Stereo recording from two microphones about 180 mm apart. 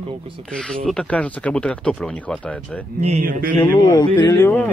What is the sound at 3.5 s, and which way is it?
Speech, 15° left (ahead or behind).